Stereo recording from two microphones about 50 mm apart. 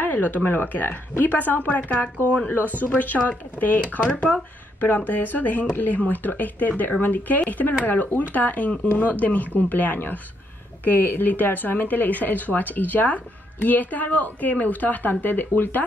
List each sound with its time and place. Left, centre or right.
0.0 s speech: left